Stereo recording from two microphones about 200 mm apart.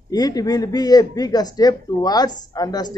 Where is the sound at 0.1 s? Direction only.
20° left (ahead or behind).